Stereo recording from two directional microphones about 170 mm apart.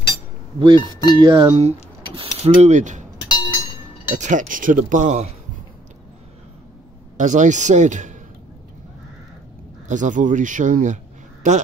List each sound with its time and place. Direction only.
0.6 s speech: 30° right (ahead or behind)
1.5 s speech: 40° right (ahead or behind)
3.3 s a sound: 25° left (ahead or behind)
4.2 s speech: 50° right (ahead or behind)
7.2 s speech: 45° right (ahead or behind)
9.8 s speech: 45° right (ahead or behind)